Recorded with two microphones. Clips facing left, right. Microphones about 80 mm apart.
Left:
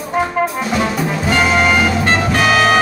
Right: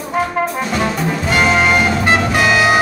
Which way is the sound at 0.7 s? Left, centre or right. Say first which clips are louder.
Left 1 dB; centre.